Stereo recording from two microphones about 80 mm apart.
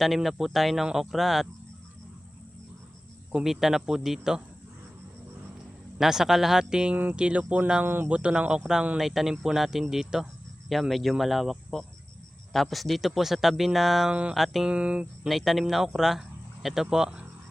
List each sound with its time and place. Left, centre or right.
0.0 s speech: centre
3.3 s speech: centre
6.0 s speech: centre
14.1 s speech: centre
14.3 s speech: centre
14.7 s speech: centre
15.3 s speech: centre